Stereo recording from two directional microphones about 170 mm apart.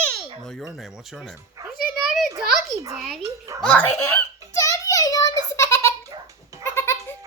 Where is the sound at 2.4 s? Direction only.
Centre (ahead or behind).